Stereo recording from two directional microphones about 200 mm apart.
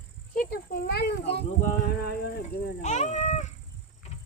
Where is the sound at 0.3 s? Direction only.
50° left (ahead or behind).